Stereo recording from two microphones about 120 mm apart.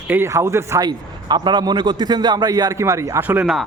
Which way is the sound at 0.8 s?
35° right (ahead or behind).